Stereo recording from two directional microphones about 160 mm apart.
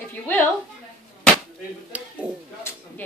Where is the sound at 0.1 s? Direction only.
10° left (ahead or behind).